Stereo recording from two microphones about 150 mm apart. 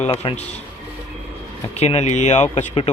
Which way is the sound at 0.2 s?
45° left (ahead or behind).